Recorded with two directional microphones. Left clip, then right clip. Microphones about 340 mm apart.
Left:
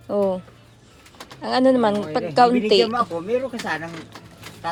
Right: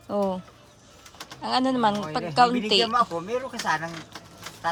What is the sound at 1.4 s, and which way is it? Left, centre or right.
Speech, centre.